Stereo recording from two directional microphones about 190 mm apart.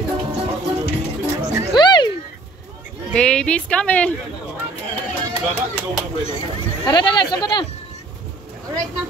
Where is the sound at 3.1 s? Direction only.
5° left (ahead or behind).